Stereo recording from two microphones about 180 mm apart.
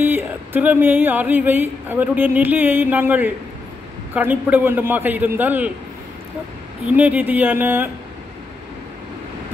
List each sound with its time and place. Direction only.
0.0 s music: 10° right (ahead or behind)
7.0 s music: 10° right (ahead or behind)